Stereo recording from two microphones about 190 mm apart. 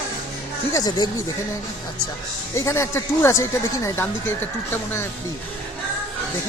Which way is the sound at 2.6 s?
15° left (ahead or behind).